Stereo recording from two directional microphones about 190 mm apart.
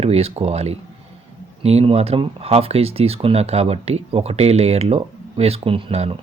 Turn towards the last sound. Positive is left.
turn(degrees=-30)  # may be behind; listen again after turning